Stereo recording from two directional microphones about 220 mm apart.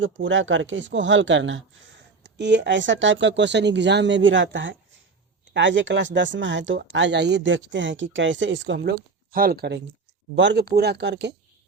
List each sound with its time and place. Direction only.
0.0 s speech: 60° right (ahead or behind)